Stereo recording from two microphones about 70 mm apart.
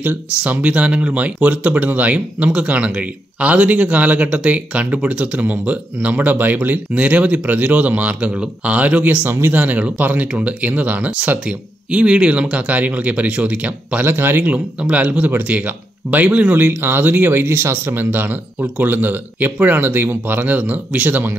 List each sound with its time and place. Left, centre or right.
0.4 s speech: centre
14.0 s speech: right
14.5 s speech: centre